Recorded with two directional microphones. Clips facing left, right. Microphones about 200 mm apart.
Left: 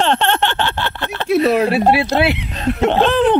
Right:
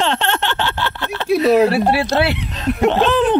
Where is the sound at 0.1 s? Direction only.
55° left (ahead or behind).